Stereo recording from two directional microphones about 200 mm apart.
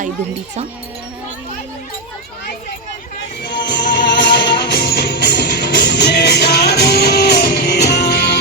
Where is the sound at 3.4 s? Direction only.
60° left (ahead or behind).